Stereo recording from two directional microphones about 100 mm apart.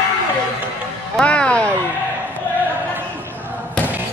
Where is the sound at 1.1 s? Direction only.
10° left (ahead or behind).